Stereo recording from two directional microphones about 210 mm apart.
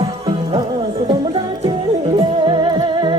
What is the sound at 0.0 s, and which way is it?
Music, 20° right (ahead or behind).